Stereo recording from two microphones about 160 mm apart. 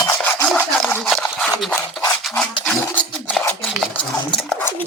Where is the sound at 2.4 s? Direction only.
5° left (ahead or behind).